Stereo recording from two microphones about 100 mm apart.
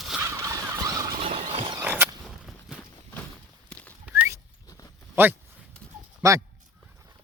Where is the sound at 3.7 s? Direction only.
10° left (ahead or behind).